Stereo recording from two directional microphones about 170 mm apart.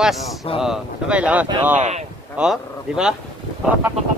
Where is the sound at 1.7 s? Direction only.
40° right (ahead or behind).